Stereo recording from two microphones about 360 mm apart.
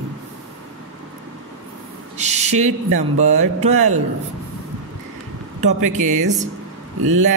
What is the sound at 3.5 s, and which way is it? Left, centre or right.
Speech, centre.